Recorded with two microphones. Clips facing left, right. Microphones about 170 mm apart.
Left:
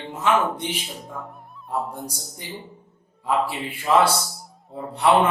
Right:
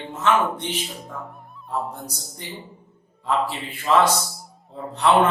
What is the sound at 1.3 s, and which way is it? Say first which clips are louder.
Music: even; centre (ahead or behind).